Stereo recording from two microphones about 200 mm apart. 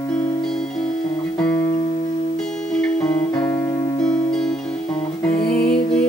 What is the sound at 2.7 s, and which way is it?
Music, 5° left (ahead or behind).